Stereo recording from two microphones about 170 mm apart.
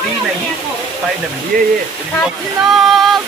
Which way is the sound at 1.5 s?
55° right (ahead or behind).